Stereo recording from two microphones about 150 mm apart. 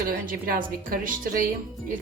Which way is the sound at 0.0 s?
65° right (ahead or behind).